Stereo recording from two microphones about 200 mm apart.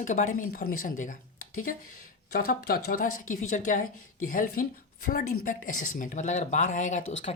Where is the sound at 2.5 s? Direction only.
45° left (ahead or behind).